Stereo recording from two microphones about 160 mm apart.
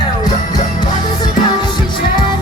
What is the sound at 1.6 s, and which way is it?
Music, 30° left (ahead or behind).